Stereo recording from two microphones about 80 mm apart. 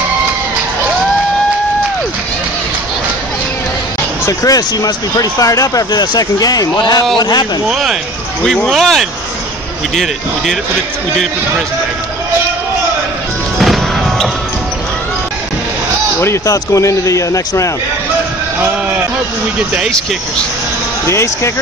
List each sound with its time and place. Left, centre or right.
4.3 s speech: left
7.6 s speech: centre
13.6 s music: centre
16.4 s speech: left
21.1 s speech: left